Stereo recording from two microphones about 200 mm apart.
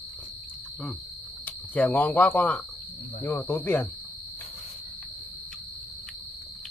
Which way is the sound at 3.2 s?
10° left (ahead or behind).